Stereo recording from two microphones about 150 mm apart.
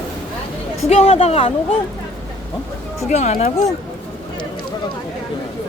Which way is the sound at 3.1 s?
45° left (ahead or behind).